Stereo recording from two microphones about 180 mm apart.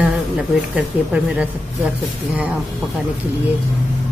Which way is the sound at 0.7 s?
5° right (ahead or behind).